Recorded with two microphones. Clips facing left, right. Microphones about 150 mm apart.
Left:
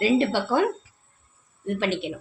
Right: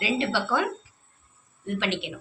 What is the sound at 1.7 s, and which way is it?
Speech, 45° left (ahead or behind).